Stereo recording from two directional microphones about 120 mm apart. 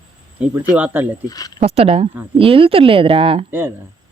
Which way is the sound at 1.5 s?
55° right (ahead or behind).